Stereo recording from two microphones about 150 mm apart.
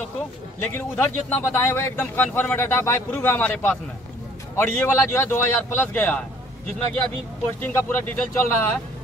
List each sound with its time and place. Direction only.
0.6 s speech: 10° left (ahead or behind)
7.6 s speech: 15° left (ahead or behind)